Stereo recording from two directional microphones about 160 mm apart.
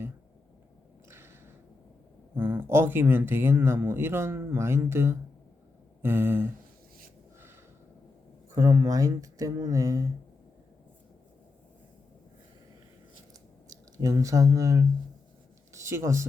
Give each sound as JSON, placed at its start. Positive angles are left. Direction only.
{"t": 1.1, "sound": "a sound", "side_deg": -15}
{"t": 2.3, "sound": "speech", "side_deg": -15}
{"t": 8.5, "sound": "speech", "side_deg": -20}
{"t": 13.7, "sound": "speech", "side_deg": -20}